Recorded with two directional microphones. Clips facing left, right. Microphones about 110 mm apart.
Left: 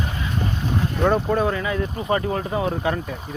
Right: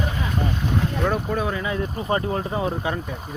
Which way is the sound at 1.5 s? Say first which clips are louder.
Left 1 dB; 20° right (ahead or behind).